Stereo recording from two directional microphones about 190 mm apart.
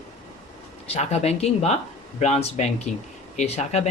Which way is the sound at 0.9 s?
35° left (ahead or behind).